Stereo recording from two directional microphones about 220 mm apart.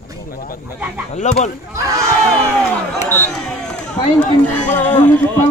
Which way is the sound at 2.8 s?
5° left (ahead or behind).